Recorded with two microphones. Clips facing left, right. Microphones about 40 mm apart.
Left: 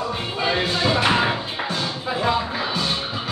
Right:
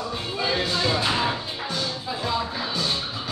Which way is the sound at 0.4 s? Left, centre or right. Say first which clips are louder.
Left 3 dB; left.